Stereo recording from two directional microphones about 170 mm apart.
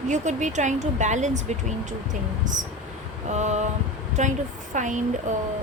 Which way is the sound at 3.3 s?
45° right (ahead or behind).